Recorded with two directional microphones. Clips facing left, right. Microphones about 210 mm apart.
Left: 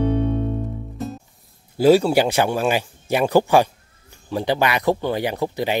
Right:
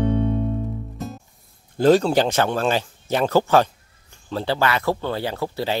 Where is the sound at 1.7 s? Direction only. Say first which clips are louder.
Left 1 dB; 10° left (ahead or behind).